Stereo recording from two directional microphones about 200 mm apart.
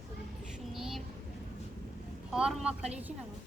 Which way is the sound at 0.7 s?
Centre (ahead or behind).